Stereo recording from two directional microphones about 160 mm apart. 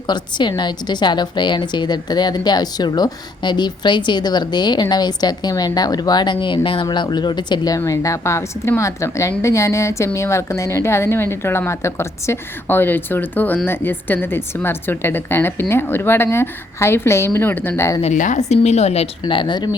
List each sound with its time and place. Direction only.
0.1 s a woman's voice: 25° left (ahead or behind)
18.0 s a woman's voice: 50° left (ahead or behind)
19.2 s a woman's voice: 30° left (ahead or behind)